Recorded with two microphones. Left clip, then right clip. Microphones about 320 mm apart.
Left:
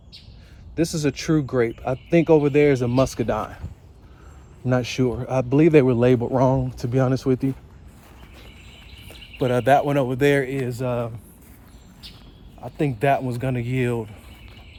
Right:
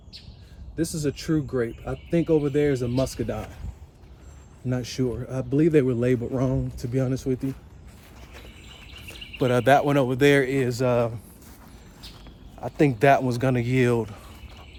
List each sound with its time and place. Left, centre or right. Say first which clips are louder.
0.9 s a man's voice: left 3 dB; centre
4.6 s a man's voice: left 6 dB; centre
9.4 s speech: left 1 dB; centre
12.5 s speech: right 3 dB; centre